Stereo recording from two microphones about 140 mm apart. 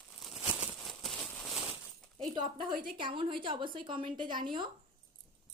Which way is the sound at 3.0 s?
35° right (ahead or behind).